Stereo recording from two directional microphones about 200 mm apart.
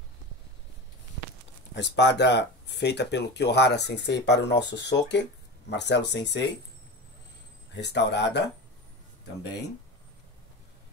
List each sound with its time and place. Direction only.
1.8 s speech: 60° left (ahead or behind)
7.7 s speech: 60° left (ahead or behind)